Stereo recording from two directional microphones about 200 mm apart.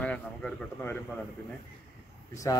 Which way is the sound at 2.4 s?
15° left (ahead or behind).